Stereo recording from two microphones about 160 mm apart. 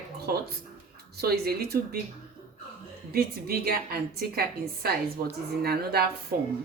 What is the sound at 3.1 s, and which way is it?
A woman's voice, 70° right (ahead or behind).